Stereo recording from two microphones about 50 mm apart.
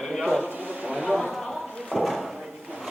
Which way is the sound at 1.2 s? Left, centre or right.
Centre.